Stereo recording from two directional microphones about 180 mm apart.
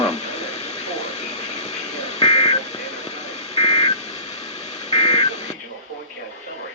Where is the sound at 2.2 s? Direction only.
35° left (ahead or behind).